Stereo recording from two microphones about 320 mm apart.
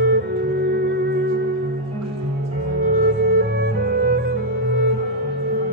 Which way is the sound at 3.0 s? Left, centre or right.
Right.